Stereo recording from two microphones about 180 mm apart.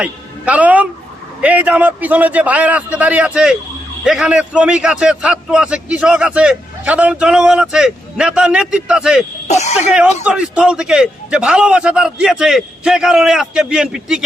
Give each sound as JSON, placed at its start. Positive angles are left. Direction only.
{"t": 0.0, "sound": "a man's voice", "side_deg": -10}
{"t": 9.5, "sound": "speech", "side_deg": 40}
{"t": 10.2, "sound": "a man's voice", "side_deg": -5}